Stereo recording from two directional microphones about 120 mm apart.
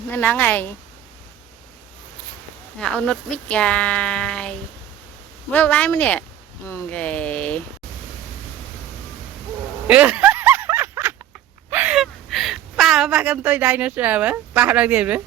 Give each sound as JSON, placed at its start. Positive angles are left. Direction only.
{"t": 0.1, "sound": "speech", "side_deg": 15}
{"t": 2.7, "sound": "speech", "side_deg": 5}
{"t": 9.8, "sound": "a sound", "side_deg": -10}
{"t": 11.7, "sound": "gasp", "side_deg": -15}
{"t": 11.9, "sound": "speech", "side_deg": 0}